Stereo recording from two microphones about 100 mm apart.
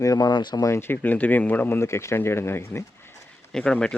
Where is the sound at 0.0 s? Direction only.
35° left (ahead or behind).